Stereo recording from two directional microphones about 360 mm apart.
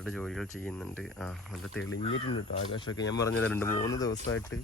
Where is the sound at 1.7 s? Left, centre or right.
Left.